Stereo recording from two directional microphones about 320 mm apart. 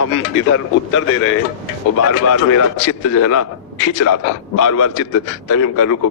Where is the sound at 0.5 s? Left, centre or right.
Left.